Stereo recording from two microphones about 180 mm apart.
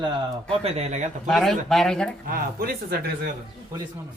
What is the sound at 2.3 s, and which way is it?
Speech, 55° right (ahead or behind).